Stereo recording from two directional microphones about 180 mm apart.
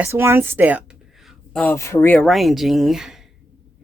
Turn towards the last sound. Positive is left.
turn(degrees=0)  # may be behind; listen again after turning